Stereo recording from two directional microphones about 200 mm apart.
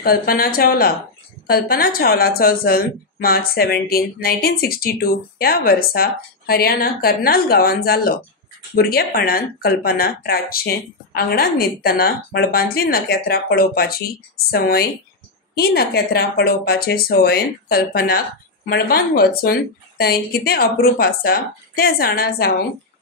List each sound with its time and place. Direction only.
0.0 s a woman's voice: 50° left (ahead or behind)